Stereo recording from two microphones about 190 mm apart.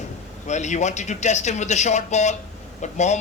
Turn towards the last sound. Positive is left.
turn(degrees=40)  # may be behind; listen again after turning